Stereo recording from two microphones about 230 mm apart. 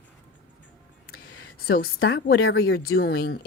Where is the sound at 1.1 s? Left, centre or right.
Left.